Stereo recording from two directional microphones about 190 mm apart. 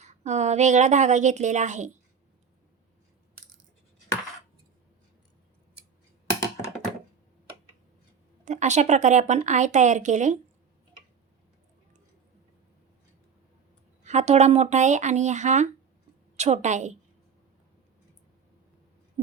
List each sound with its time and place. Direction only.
0.0 s a woman's voice: 40° right (ahead or behind)
8.4 s a woman's voice: 40° right (ahead or behind)
14.0 s a woman's voice: 35° right (ahead or behind)